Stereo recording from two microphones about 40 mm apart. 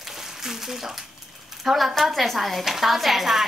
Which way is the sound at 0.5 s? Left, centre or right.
Centre.